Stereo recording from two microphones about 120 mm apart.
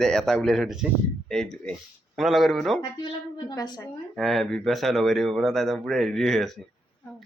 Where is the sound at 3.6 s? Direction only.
35° left (ahead or behind).